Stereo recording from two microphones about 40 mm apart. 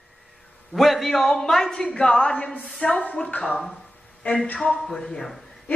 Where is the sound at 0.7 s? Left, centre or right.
Centre; by 2.5 s left.